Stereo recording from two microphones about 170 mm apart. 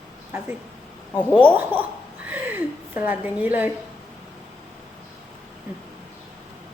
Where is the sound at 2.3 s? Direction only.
10° right (ahead or behind).